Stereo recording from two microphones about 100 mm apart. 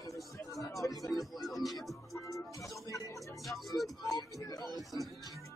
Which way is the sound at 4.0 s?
35° left (ahead or behind).